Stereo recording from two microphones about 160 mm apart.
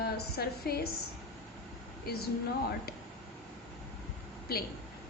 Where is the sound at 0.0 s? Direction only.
80° left.